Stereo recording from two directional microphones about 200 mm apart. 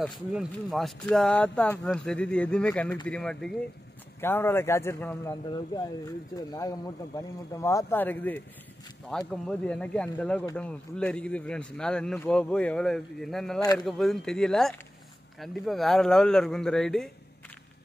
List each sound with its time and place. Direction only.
0.3 s a man's voice: centre (ahead or behind)
13.6 s a man's voice: 20° left (ahead or behind)
13.8 s speech: centre (ahead or behind)